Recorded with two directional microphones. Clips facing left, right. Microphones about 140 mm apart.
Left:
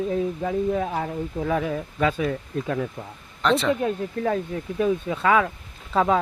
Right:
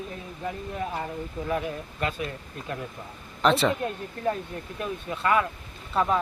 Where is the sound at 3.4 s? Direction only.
5° right (ahead or behind).